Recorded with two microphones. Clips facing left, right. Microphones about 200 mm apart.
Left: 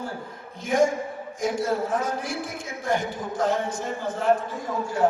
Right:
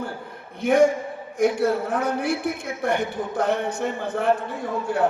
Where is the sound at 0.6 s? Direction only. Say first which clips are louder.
Right 4 dB; 60° right (ahead or behind).